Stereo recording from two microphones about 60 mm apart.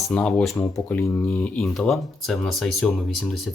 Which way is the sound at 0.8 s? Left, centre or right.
Left.